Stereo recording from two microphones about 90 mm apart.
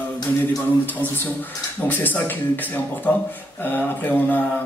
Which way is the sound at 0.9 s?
20° left (ahead or behind).